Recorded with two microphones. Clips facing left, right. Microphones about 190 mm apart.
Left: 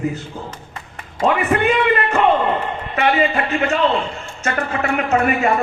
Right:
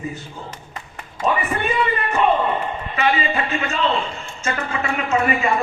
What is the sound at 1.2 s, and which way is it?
A man's voice, 70° left (ahead or behind).